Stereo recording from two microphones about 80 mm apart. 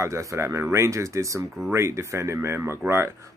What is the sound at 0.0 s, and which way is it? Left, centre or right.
Speech, right.